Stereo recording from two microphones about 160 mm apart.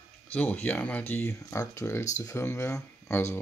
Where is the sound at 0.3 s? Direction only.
10° left (ahead or behind).